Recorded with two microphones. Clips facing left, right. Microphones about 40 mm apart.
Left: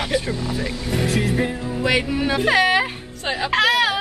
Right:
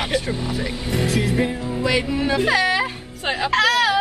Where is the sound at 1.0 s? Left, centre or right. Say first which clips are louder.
Even; left.